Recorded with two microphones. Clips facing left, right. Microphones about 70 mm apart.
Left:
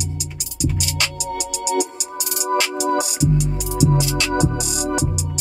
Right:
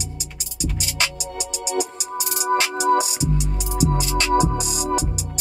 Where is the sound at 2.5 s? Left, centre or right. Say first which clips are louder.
Even; right.